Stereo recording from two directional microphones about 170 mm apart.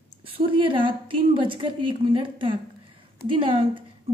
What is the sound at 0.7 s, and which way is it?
A woman's voice, 30° right (ahead or behind).